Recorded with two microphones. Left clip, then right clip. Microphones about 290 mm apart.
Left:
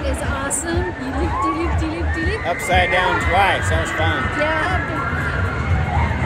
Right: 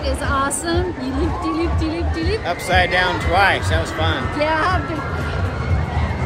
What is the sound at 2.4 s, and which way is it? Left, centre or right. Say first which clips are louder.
Speech: even; centre.